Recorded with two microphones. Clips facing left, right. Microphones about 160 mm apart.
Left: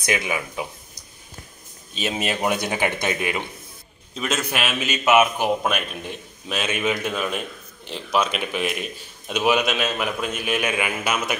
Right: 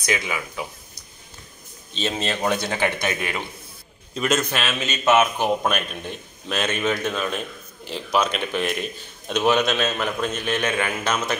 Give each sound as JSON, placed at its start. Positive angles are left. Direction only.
{"t": 0.0, "sound": "a man's voice", "side_deg": 20}
{"t": 4.1, "sound": "a man's voice", "side_deg": 0}
{"t": 4.5, "sound": "a man's voice", "side_deg": 15}